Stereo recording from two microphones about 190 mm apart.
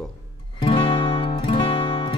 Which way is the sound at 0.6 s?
30° left (ahead or behind).